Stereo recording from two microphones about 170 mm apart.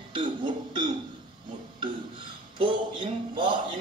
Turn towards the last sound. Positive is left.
turn(degrees=-30)  # may be behind; listen again after turning